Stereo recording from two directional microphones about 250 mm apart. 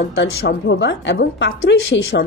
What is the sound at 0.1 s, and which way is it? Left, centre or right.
A woman's voice, left.